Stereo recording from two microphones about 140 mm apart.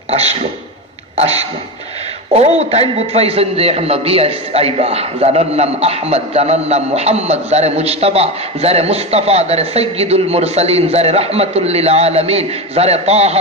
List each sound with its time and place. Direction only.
0.1 s a man's voice: 50° right (ahead or behind)